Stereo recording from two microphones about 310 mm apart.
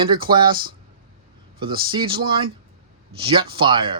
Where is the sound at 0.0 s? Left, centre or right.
Centre.